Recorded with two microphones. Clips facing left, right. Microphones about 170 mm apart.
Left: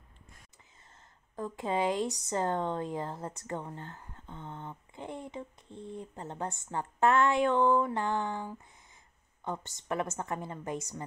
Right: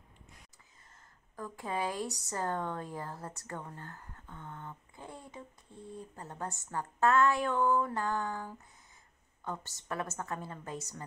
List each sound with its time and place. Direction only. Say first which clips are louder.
1.3 s speech: left 5 dB; 25° left (ahead or behind)